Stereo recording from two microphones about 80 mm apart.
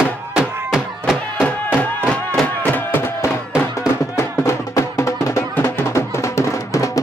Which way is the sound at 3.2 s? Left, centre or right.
Left.